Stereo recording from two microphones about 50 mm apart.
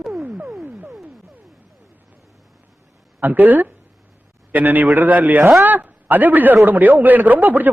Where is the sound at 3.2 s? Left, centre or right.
Right.